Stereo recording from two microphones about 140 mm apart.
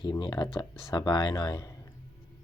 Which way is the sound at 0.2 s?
30° left (ahead or behind).